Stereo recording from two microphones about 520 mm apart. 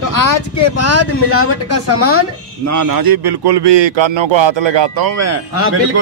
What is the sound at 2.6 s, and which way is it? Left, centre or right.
A man's voice, right.